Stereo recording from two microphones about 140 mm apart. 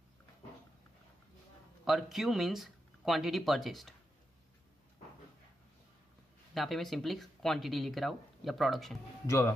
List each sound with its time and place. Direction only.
1.9 s speech: centre (ahead or behind)
6.5 s speech: centre (ahead or behind)
9.2 s speech: 20° left (ahead or behind)